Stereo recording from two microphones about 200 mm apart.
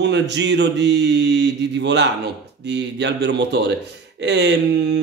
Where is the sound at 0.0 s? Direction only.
60° right (ahead or behind).